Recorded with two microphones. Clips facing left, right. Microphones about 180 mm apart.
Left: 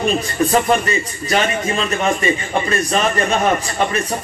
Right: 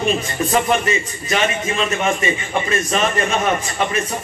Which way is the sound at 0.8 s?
35° left (ahead or behind).